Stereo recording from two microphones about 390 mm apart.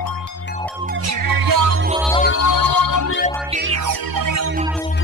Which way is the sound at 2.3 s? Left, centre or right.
Left.